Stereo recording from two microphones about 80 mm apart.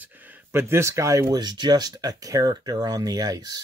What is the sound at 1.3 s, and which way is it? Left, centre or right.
Speech, right.